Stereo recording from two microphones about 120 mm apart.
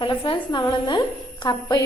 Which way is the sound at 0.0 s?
40° left (ahead or behind).